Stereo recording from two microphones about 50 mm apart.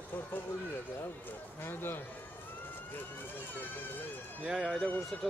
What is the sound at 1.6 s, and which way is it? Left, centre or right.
Speech, left.